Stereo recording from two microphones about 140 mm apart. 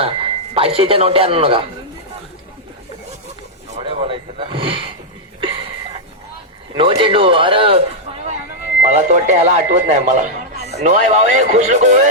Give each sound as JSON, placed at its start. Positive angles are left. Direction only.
{"t": 0.0, "sound": "speech", "side_deg": -45}
{"t": 3.8, "sound": "speech", "side_deg": -40}
{"t": 5.4, "sound": "a sound", "side_deg": -40}
{"t": 6.7, "sound": "speech", "side_deg": -40}
{"t": 8.9, "sound": "speech", "side_deg": -55}